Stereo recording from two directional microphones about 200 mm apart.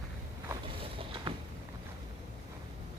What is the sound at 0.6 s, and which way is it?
Vehicle, 25° right (ahead or behind).